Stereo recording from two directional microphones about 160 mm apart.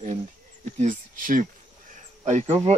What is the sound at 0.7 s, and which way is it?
Speech, 55° right (ahead or behind).